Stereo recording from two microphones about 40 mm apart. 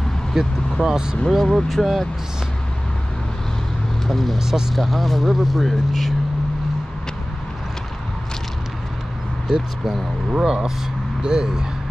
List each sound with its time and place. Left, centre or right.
0.3 s speech: centre
1.4 s speech: centre
4.1 s speech: centre
4.4 s speech: centre
4.7 s speech: centre
9.5 s speech: right